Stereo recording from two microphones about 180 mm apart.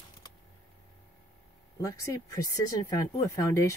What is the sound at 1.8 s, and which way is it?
Speech, 20° left (ahead or behind).